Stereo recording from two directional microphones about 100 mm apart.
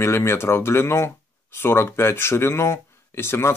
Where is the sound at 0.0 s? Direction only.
25° left (ahead or behind).